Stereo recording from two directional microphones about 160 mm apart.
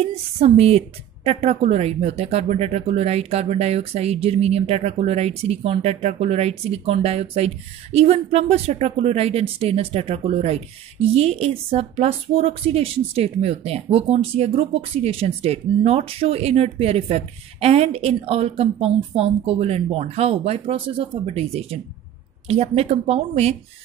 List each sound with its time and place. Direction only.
0.4 s speech: 40° right (ahead or behind)